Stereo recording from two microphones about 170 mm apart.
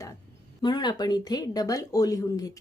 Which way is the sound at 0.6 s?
25° left (ahead or behind).